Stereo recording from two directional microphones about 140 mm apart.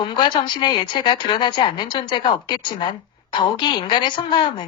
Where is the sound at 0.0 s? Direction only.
35° left (ahead or behind).